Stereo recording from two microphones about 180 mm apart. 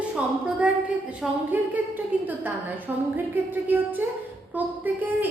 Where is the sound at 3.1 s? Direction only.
10° right (ahead or behind).